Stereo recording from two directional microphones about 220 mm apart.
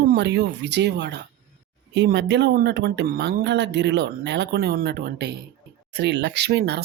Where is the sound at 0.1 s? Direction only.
50° right (ahead or behind).